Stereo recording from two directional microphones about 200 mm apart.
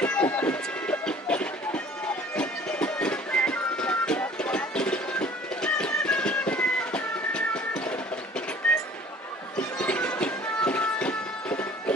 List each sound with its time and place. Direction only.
0.0 s music: 10° left (ahead or behind)
9.6 s music: 5° left (ahead or behind)